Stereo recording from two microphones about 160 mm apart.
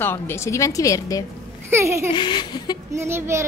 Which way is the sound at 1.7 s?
15° right (ahead or behind).